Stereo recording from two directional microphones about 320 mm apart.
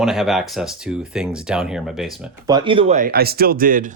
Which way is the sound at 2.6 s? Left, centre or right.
Centre.